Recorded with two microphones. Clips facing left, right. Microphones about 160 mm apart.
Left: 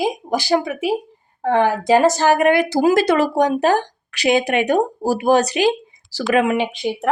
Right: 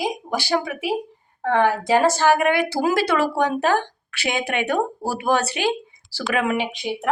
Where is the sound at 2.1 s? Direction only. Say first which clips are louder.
Left 3 dB; 45° left (ahead or behind).